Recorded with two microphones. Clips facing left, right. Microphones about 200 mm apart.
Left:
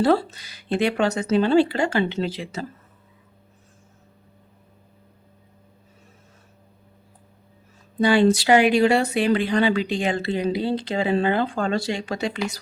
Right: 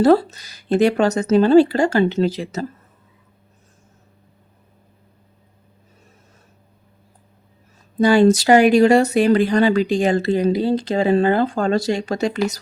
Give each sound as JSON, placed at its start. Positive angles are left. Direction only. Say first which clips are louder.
{"t": 0.0, "sound": "speech", "louder": "right 5 dB", "side_deg": -40}
{"t": 8.0, "sound": "speech", "louder": "right 4 dB", "side_deg": -45}